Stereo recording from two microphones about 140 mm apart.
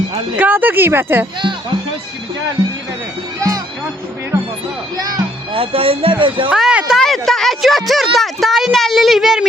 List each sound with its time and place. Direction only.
0.3 s speech: 10° right (ahead or behind)
4.9 s speech: 30° right (ahead or behind)
5.5 s speech: 40° right (ahead or behind)
6.5 s speech: 5° right (ahead or behind)